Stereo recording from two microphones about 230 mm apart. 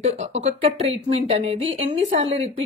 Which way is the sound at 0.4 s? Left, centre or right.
Right.